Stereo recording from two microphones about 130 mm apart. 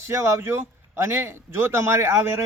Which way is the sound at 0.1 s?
20° right (ahead or behind).